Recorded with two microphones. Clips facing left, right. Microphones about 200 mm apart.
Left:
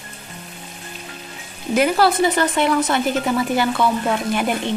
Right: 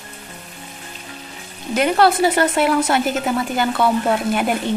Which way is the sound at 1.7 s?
Centre (ahead or behind).